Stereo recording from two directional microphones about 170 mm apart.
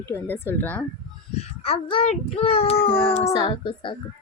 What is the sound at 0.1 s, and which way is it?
Speech, 10° left (ahead or behind).